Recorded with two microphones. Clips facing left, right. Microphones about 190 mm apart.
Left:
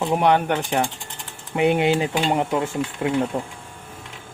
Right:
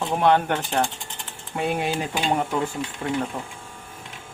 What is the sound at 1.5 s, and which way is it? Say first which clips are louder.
Music: left 6 dB; 20° left (ahead or behind).